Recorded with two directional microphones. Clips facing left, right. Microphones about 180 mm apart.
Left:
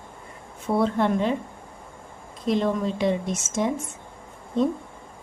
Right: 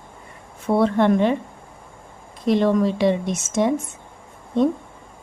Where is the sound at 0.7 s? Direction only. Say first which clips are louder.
Right 5 dB; 70° right (ahead or behind).